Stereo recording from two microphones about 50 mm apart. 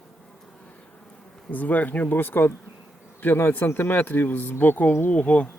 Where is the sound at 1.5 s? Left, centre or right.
Left.